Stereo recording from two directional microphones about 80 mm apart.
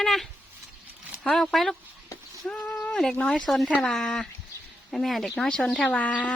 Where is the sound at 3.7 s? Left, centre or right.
Centre.